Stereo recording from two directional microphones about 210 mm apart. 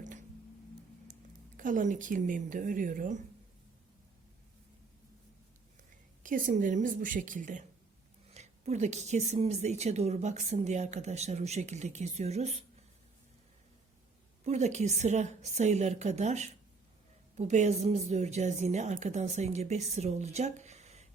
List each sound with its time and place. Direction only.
0.0 s a sound: 35° right (ahead or behind)
1.5 s speech: 40° right (ahead or behind)
6.2 s speech: 40° right (ahead or behind)
14.4 s speech: 30° right (ahead or behind)